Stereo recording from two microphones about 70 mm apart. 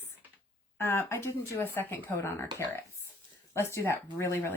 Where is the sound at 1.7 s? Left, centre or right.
Left.